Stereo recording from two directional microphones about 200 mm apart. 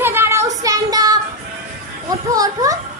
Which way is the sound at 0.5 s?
15° right (ahead or behind).